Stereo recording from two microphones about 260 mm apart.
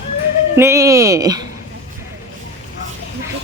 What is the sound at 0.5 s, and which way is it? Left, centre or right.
Speech, centre.